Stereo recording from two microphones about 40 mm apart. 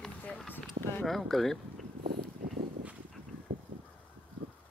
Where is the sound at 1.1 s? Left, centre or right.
Centre.